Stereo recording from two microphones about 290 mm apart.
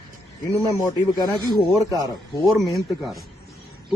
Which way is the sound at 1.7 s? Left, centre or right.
Centre.